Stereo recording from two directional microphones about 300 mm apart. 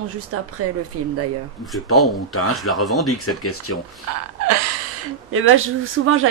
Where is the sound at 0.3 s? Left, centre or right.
Right.